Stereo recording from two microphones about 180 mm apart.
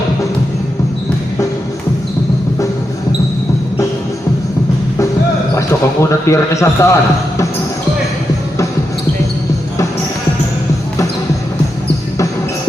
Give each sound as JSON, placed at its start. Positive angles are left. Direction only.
{"t": 5.5, "sound": "speech", "side_deg": 15}